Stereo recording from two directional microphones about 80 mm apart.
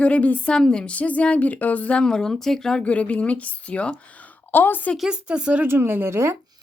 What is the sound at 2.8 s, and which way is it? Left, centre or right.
A woman's voice, centre.